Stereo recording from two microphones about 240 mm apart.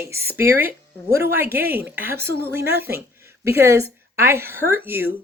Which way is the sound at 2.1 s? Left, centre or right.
Right.